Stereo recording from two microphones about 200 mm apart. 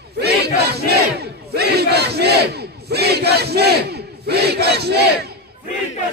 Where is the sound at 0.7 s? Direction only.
55° right (ahead or behind).